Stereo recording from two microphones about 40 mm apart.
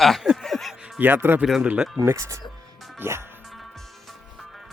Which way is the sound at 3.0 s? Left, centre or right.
Right.